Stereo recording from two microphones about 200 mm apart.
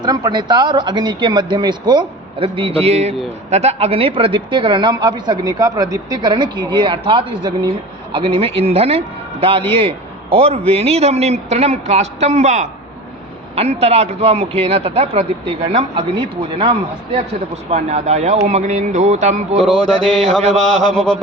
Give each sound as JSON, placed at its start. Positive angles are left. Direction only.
{"t": 0.0, "sound": "a man's voice", "side_deg": -20}
{"t": 19.6, "sound": "mantra", "side_deg": 5}